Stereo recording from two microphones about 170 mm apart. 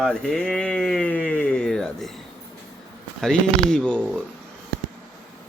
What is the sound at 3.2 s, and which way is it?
Speech, 5° left (ahead or behind).